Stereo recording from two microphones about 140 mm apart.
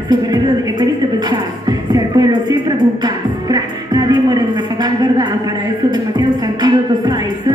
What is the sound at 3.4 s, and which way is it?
Music, 30° right (ahead or behind).